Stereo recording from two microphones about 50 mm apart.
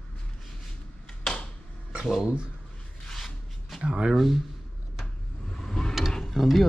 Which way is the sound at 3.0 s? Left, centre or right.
Centre.